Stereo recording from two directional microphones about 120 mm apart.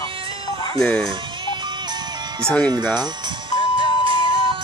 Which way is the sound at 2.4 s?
10° left (ahead or behind).